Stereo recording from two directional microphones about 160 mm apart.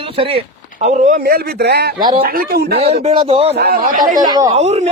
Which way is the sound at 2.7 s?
40° right (ahead or behind).